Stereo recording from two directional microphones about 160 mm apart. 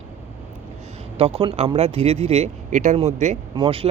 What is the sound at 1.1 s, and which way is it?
Speech, 40° right (ahead or behind).